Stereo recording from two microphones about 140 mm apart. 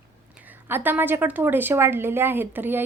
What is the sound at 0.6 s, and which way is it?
A woman's voice, 15° right (ahead or behind).